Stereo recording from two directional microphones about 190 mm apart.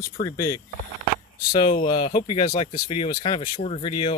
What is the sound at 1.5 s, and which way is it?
Speech, 30° left (ahead or behind).